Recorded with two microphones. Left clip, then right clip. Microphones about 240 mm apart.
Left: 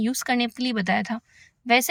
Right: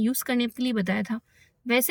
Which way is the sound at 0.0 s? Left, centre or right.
Centre.